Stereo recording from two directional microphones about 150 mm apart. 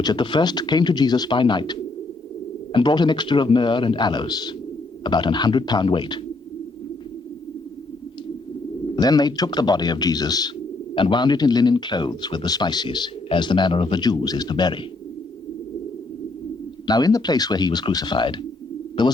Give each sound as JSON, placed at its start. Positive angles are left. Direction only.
{"t": 0.0, "sound": "a man's voice", "side_deg": 30}
{"t": 9.0, "sound": "speech", "side_deg": 25}
{"t": 16.8, "sound": "speech", "side_deg": 25}